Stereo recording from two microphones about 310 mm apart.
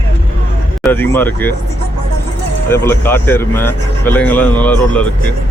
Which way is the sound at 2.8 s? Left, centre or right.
Centre.